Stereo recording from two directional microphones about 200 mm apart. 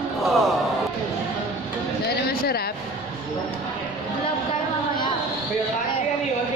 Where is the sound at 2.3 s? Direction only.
50° left (ahead or behind).